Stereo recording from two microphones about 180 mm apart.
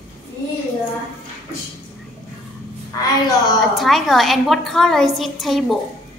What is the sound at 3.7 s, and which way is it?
A woman's voice, centre (ahead or behind).